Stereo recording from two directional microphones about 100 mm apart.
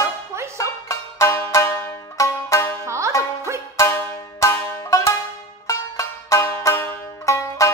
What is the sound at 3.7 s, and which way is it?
Music, 25° left (ahead or behind).